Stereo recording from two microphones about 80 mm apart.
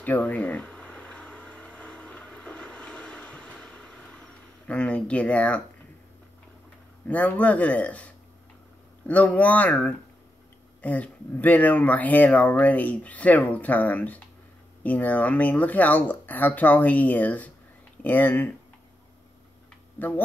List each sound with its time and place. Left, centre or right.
0.0 s a sound: left
7.1 s speech: centre
20.0 s speech: left